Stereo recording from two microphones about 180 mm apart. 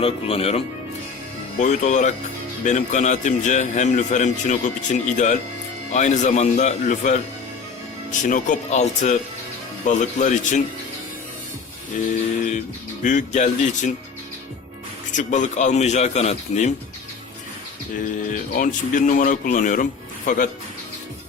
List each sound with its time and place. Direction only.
0.0 s a man's voice: 30° left (ahead or behind)
8.3 s a man's voice: 45° left (ahead or behind)
12.5 s speech: 45° left (ahead or behind)
15.1 s a man's voice: 45° left (ahead or behind)
18.0 s speech: 45° left (ahead or behind)